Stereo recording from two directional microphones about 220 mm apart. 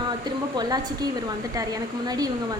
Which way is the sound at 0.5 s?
20° right (ahead or behind).